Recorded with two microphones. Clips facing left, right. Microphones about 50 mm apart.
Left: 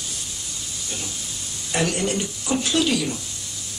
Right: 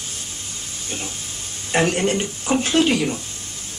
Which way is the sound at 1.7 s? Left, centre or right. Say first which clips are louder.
Right 4 dB; right.